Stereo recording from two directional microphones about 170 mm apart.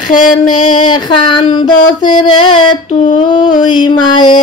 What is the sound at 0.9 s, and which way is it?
Mantra, 25° left (ahead or behind).